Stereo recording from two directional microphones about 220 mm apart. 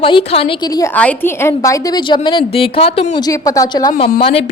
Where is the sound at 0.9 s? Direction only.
10° left (ahead or behind).